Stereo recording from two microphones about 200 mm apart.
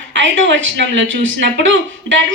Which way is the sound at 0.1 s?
65° right (ahead or behind).